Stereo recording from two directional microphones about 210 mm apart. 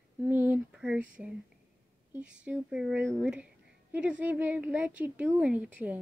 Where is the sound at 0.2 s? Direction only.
10° right (ahead or behind).